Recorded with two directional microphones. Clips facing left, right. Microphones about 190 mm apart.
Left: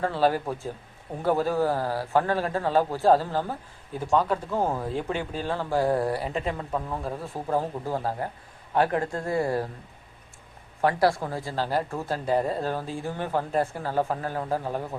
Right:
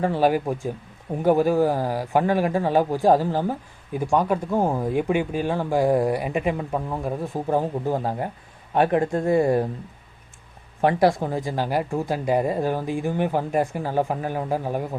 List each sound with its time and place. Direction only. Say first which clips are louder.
0.0 s speech: right 4 dB; 15° right (ahead or behind)
10.8 s speech: right 4 dB; 20° right (ahead or behind)